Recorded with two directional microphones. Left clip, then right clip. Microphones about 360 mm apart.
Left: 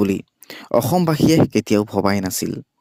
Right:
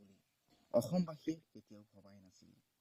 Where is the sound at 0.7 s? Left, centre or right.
Left.